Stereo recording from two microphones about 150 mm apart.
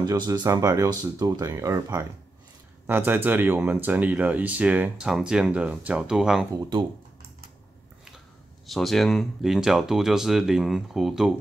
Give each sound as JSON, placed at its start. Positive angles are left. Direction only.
{"t": 0.0, "sound": "speech", "side_deg": -25}
{"t": 8.6, "sound": "speech", "side_deg": 0}